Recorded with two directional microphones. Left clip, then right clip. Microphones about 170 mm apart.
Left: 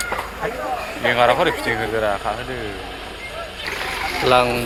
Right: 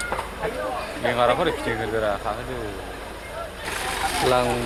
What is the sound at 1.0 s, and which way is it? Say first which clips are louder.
Speech: left 5 dB; 30° left (ahead or behind).